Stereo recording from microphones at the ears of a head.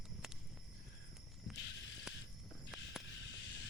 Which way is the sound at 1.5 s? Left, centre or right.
Left.